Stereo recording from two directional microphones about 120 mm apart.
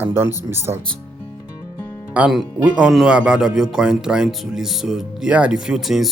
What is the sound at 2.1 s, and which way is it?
Speech, 10° right (ahead or behind).